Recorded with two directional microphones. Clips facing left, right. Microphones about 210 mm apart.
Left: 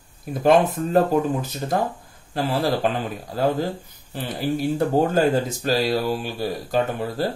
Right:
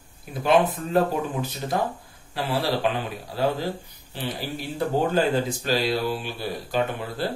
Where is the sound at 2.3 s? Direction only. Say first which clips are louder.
Left 3 dB; 45° left (ahead or behind).